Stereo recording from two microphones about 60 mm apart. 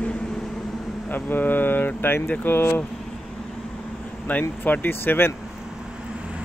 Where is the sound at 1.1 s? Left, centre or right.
Left.